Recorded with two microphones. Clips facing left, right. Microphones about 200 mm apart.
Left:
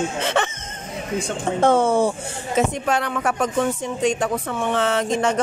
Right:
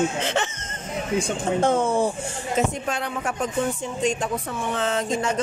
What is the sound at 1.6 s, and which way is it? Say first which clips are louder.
Speech: left 5 dB; 80° left.